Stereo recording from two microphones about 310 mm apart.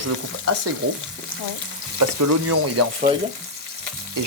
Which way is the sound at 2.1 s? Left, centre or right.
Right.